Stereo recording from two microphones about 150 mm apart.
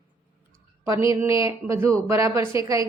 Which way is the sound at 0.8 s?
20° right (ahead or behind).